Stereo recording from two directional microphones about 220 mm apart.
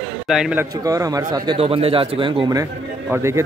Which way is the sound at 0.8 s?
15° right (ahead or behind).